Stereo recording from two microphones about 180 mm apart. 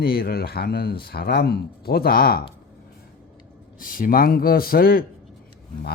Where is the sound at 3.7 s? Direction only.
50° left (ahead or behind).